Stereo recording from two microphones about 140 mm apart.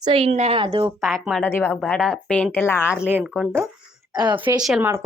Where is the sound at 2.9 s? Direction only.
5° right (ahead or behind).